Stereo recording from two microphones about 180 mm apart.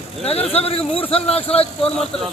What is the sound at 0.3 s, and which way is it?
Speech, 35° left (ahead or behind).